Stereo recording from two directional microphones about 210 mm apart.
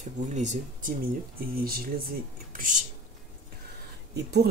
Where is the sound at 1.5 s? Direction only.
45° right (ahead or behind).